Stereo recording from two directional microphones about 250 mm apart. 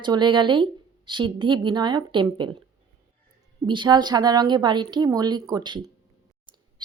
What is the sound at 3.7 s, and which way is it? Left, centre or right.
A woman's voice, centre.